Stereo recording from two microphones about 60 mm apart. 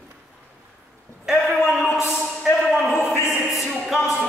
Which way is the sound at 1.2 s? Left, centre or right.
Centre.